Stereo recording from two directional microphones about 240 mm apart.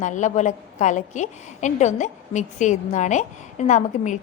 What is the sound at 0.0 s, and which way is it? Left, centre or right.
A woman's voice, left.